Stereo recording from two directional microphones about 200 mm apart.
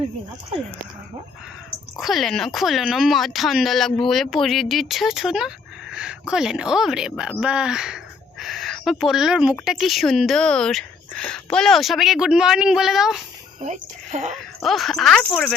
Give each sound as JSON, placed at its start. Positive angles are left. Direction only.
{"t": 2.0, "sound": "speech", "side_deg": 0}
{"t": 13.6, "sound": "speech", "side_deg": -35}
{"t": 14.6, "sound": "speech", "side_deg": 0}